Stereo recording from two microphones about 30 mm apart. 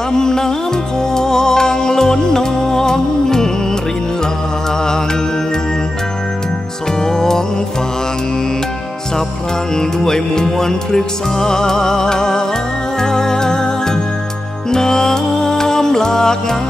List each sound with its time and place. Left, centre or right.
0.1 s music: centre
7.0 s music: centre
9.8 s music: left